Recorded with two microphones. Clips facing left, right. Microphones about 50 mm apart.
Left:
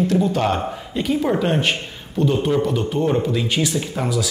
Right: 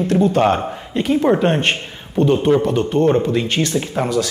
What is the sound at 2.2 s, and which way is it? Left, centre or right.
Speech, centre.